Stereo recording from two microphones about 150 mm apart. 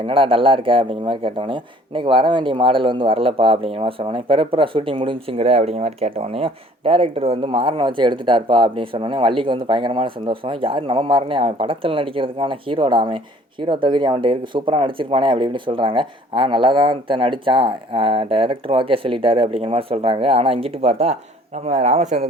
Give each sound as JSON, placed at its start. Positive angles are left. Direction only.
{"t": 0.0, "sound": "speech", "side_deg": -35}